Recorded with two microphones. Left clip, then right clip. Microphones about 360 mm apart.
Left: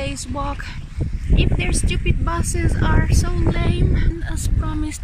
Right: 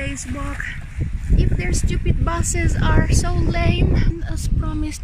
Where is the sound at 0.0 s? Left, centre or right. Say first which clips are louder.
Left 1 dB; centre.